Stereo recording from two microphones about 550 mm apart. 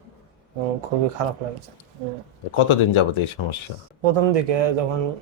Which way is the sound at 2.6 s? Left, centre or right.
Left.